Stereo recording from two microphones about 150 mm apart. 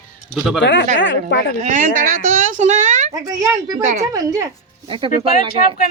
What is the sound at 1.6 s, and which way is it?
A woman's voice, 55° right (ahead or behind).